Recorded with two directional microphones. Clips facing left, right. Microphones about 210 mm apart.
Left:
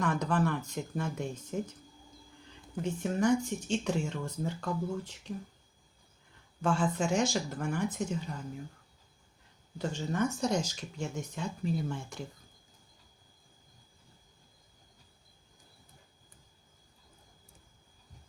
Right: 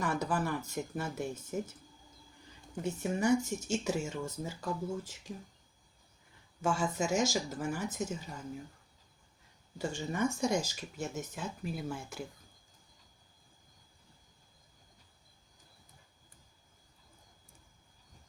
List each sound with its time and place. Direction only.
0.0 s speech: 10° right (ahead or behind)
2.8 s speech: 10° right (ahead or behind)
6.6 s speech: 10° right (ahead or behind)
9.8 s speech: 10° right (ahead or behind)